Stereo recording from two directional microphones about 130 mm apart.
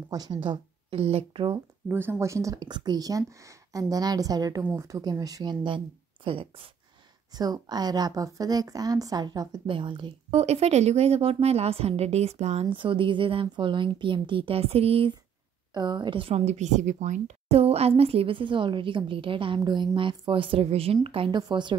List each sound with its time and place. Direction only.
0.1 s speech: 30° right (ahead or behind)
1.9 s speech: 15° right (ahead or behind); by 5.8 s 35° right (ahead or behind)
7.3 s speech: 30° right (ahead or behind)
10.3 s a woman's voice: 55° right (ahead or behind)
12.6 s speech: 40° right (ahead or behind)
15.7 s a woman's voice: 35° right (ahead or behind)